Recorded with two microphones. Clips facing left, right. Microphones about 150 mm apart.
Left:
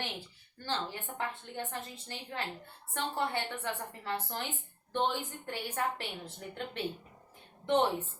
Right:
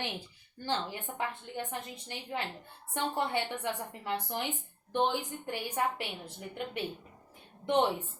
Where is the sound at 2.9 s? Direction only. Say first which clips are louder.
Right 2 dB; 15° right (ahead or behind).